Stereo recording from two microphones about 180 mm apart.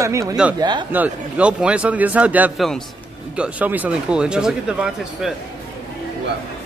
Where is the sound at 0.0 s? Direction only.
15° right (ahead or behind).